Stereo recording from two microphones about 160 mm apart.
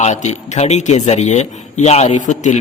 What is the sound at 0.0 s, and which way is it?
A man's voice, 45° left (ahead or behind).